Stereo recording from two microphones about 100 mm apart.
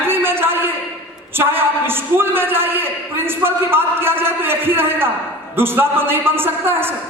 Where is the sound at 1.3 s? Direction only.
20° right (ahead or behind).